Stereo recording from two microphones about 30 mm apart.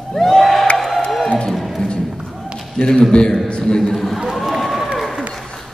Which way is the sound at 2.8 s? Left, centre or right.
Left.